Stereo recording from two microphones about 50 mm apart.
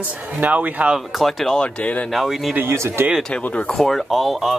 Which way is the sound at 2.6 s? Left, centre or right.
Right.